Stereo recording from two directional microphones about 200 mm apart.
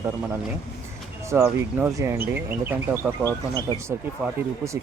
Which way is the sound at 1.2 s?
15° right (ahead or behind).